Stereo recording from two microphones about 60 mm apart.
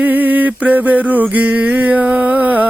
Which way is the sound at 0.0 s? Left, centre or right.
Right.